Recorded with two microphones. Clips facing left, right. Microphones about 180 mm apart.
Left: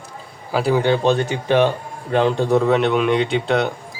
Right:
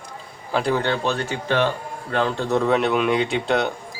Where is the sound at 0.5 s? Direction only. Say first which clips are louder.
Left 4 dB; 5° left (ahead or behind).